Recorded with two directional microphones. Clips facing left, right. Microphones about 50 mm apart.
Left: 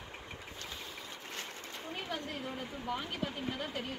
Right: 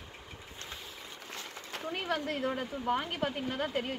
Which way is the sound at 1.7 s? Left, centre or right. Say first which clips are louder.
Right 8 dB; right.